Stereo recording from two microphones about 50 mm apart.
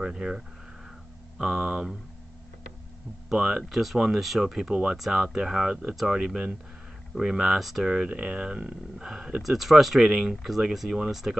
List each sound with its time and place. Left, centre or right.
0.0 s speech: centre
1.4 s speech: centre
3.3 s speech: centre